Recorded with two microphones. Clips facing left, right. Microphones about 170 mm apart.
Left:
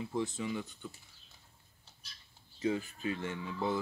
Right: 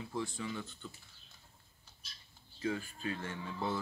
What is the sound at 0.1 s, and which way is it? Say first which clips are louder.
Speech: left 3 dB; 20° left (ahead or behind).